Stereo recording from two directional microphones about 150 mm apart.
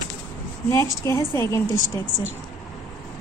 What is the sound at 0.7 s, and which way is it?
A woman's voice, 20° left (ahead or behind).